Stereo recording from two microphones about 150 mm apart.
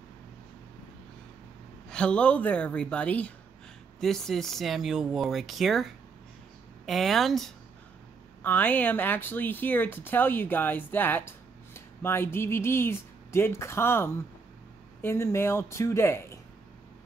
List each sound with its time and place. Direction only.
1.9 s speech: 5° left (ahead or behind)
6.9 s speech: centre (ahead or behind)
8.4 s speech: 10° left (ahead or behind)